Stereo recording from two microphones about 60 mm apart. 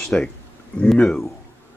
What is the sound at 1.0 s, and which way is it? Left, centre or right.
Speech, centre.